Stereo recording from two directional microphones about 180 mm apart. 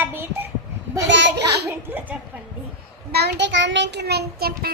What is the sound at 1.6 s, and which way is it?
Speech, 10° right (ahead or behind).